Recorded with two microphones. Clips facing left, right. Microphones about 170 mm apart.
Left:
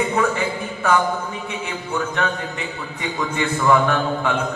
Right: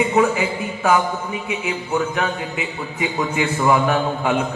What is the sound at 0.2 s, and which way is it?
A man's voice, 20° right (ahead or behind).